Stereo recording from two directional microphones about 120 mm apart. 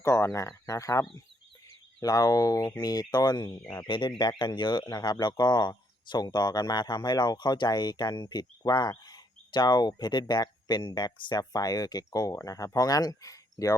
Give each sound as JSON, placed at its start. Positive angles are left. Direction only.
{"t": 0.0, "sound": "speech", "side_deg": 25}